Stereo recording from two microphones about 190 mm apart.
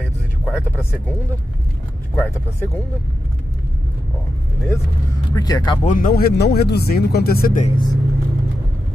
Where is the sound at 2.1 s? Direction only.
10° left (ahead or behind).